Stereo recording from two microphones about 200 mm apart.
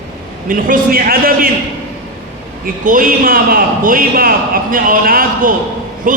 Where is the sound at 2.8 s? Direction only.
45° right (ahead or behind).